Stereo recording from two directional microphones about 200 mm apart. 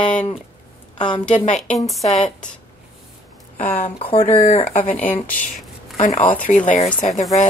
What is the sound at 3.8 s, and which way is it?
Speech, 30° left (ahead or behind).